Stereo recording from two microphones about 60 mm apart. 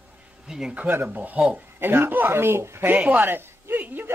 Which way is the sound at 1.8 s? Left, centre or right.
Right.